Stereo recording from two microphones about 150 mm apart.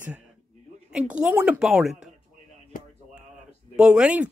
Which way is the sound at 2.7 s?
65° left (ahead or behind).